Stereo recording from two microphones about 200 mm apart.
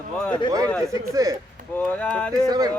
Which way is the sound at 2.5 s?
20° right (ahead or behind).